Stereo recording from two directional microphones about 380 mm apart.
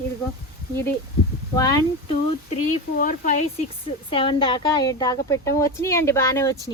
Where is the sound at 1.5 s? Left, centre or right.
Centre.